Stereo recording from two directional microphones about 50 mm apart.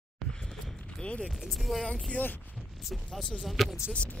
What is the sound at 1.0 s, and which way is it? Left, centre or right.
Speech, left.